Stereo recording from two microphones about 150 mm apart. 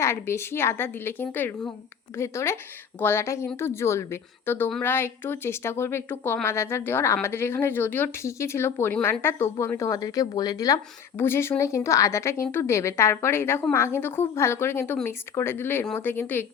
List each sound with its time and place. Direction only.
0.0 s speech: 15° left (ahead or behind)